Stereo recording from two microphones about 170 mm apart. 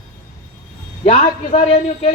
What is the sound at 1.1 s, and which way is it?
A woman's voice, 40° left (ahead or behind).